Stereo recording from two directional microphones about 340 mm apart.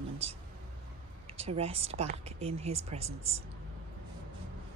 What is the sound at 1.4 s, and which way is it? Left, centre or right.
Speech, centre.